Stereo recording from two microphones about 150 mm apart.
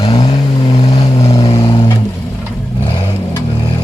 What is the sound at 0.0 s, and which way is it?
Vehicle, 35° left (ahead or behind).